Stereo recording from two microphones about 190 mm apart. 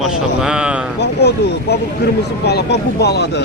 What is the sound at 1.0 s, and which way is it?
Speech, 60° left (ahead or behind).